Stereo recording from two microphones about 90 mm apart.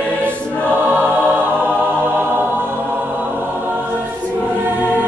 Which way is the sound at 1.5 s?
20° right (ahead or behind).